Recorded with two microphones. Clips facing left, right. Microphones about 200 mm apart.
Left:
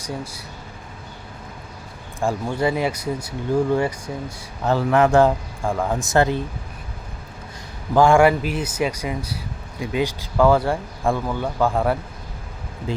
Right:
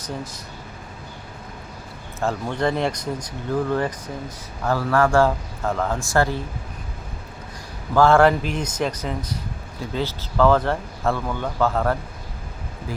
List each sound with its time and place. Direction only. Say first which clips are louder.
0.0 s speech: left 1 dB; 10° left (ahead or behind)
2.2 s speech: left 1 dB; 10° left (ahead or behind)
4.6 s a man's voice: left 2 dB; 20° left (ahead or behind)
7.9 s speech: left 1 dB; 15° left (ahead or behind)